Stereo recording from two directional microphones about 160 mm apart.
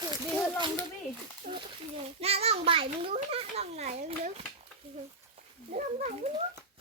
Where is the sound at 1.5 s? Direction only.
45° right (ahead or behind).